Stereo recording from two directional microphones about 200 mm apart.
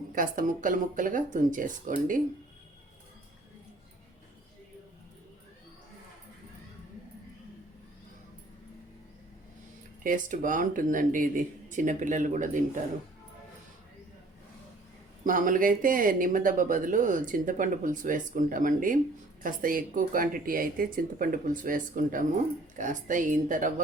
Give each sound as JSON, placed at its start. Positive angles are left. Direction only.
{"t": 0.1, "sound": "speech", "side_deg": -45}
{"t": 10.0, "sound": "speech", "side_deg": -40}
{"t": 15.2, "sound": "speech", "side_deg": -45}